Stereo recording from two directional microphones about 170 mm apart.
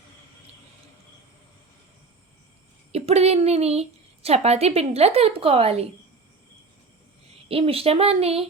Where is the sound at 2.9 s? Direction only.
40° right (ahead or behind).